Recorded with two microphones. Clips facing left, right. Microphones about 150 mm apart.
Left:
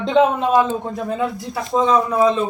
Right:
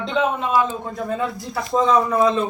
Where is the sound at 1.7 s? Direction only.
5° left (ahead or behind).